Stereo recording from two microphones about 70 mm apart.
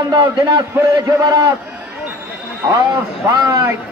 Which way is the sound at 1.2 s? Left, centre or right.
Right.